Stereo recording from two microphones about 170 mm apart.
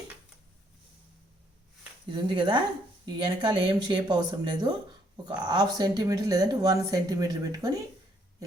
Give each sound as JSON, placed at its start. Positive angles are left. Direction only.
{"t": 2.1, "sound": "speech", "side_deg": -25}